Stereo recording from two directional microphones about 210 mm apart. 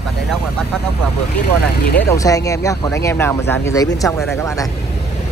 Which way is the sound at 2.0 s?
15° left (ahead or behind).